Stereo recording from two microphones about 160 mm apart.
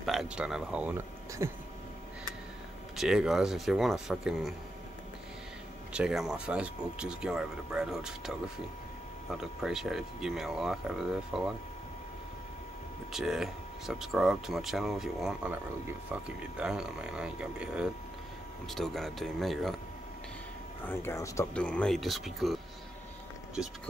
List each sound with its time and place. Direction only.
0.0 s speech: centre (ahead or behind)
3.0 s speech: 5° right (ahead or behind)
5.9 s speech: 5° right (ahead or behind)
13.1 s speech: centre (ahead or behind)
20.8 s speech: 15° left (ahead or behind)
21.5 s speech: 5° left (ahead or behind)